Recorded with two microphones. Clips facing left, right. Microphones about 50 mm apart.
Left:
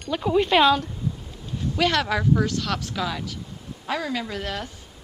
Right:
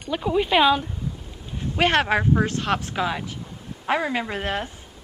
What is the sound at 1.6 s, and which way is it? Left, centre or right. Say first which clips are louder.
Speech: right 2 dB; right.